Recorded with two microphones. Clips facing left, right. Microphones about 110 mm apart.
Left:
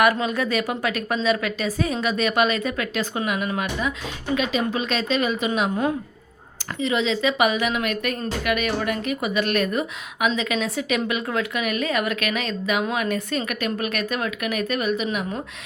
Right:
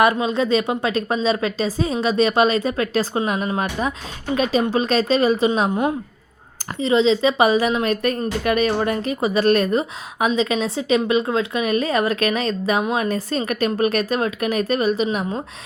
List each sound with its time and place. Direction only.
0.0 s a woman's voice: 25° right (ahead or behind)
6.7 s a woman's voice: 30° right (ahead or behind)